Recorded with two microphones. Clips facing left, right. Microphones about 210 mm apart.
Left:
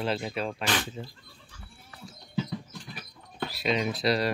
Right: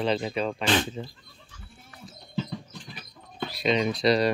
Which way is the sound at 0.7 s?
25° right (ahead or behind).